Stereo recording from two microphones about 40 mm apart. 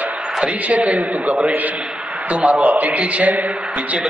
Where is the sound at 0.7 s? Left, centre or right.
Right.